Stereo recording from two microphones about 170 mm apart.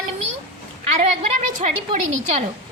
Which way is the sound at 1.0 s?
45° right (ahead or behind).